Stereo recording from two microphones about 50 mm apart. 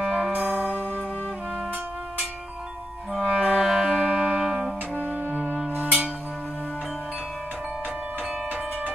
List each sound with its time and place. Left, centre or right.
0.0 s music: centre
0.4 s music: right
0.7 s music: left
3.1 s clarinet: centre
3.4 s music: centre
4.9 s music: right